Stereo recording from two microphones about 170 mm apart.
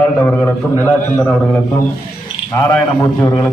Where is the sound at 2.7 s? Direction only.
15° left (ahead or behind).